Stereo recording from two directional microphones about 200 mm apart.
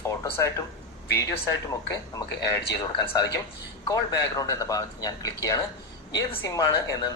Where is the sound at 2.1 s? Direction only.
15° left (ahead or behind).